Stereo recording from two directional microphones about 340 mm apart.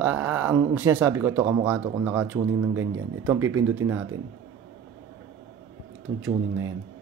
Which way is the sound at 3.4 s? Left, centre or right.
Right.